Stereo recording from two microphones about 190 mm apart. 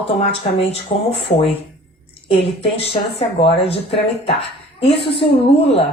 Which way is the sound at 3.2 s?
30° left (ahead or behind).